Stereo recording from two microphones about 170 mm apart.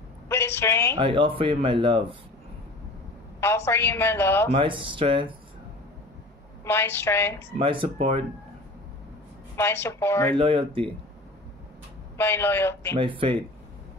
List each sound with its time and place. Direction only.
0.3 s a woman's voice: 15° left (ahead or behind)
0.9 s speech: 30° right (ahead or behind)
3.3 s a woman's voice: 15° left (ahead or behind)
4.5 s speech: 30° right (ahead or behind)
6.6 s a woman's voice: 15° left (ahead or behind)
7.5 s speech: 30° right (ahead or behind)
9.6 s a woman's voice: 15° left (ahead or behind)
10.3 s speech: 30° right (ahead or behind)
12.2 s a woman's voice: 15° left (ahead or behind)
12.9 s speech: 30° right (ahead or behind)